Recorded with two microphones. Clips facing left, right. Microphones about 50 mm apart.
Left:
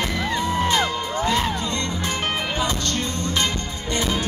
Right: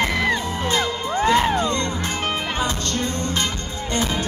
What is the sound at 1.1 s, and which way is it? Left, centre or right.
Music, right.